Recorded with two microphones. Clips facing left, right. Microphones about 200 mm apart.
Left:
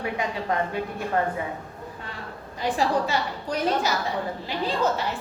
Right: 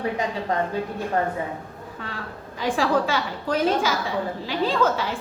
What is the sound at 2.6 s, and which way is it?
A woman's voice, 90° right.